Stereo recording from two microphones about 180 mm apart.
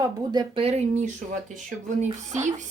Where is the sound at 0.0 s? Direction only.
25° right (ahead or behind).